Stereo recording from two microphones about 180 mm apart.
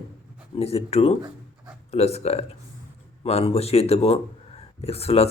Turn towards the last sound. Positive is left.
turn(degrees=35)  # may be behind; listen again after turning